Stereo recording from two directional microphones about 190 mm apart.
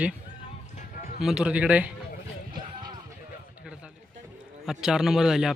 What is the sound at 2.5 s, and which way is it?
Music, 25° right (ahead or behind).